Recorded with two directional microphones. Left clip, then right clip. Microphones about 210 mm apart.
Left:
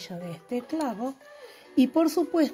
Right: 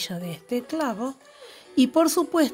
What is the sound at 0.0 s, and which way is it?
A woman's voice, 20° right (ahead or behind).